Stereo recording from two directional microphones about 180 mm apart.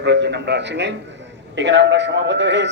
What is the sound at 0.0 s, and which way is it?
A man's voice, 70° right (ahead or behind).